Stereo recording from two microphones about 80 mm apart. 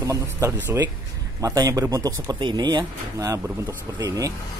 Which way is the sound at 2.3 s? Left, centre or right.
Right.